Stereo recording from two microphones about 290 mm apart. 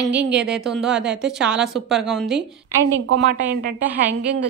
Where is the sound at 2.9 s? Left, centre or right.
Right.